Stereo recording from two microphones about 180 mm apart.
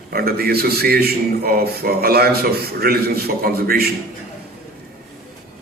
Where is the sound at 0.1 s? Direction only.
60° right (ahead or behind).